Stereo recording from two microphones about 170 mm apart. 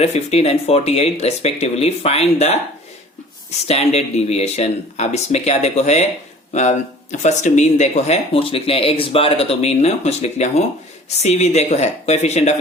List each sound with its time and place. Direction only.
0.0 s speech: 40° left (ahead or behind)
3.7 s speech: 40° left (ahead or behind)